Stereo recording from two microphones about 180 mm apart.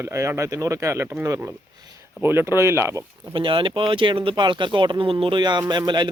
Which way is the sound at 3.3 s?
30° right (ahead or behind).